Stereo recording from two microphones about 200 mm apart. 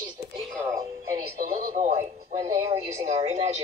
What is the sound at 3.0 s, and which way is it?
Speech, 35° right (ahead or behind).